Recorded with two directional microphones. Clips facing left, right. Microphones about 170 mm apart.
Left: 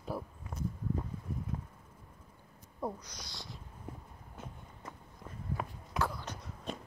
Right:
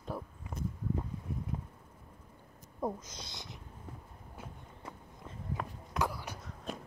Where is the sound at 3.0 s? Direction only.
20° right (ahead or behind).